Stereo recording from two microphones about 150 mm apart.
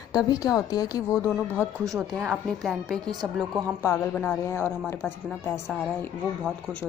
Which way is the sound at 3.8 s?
10° left (ahead or behind).